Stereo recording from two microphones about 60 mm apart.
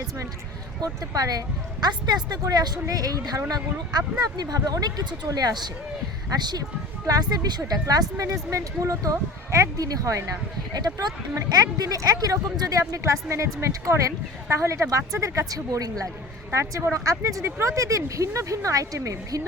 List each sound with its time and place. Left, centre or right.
0.8 s speech: right
7.1 s speech: right
8.2 s speech: right
9.7 s speech: right
10.9 s speech: right
13.2 s speech: right
16.5 s speech: right